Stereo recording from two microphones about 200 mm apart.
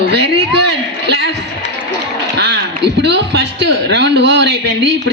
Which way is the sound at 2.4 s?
60° right (ahead or behind).